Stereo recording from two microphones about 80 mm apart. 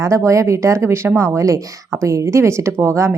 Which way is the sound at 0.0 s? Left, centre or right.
Right.